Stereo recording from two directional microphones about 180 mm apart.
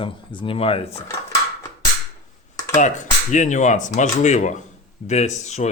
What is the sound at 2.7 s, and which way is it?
Speech, 40° left (ahead or behind).